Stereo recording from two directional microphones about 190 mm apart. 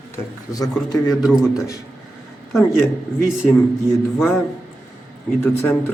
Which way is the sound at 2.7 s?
10° left (ahead or behind).